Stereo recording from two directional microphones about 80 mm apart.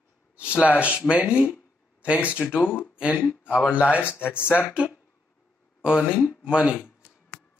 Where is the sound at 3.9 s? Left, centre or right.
Left.